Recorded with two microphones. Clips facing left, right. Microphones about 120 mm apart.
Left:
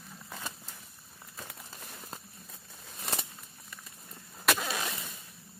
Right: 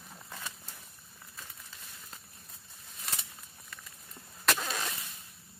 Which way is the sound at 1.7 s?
45° left (ahead or behind).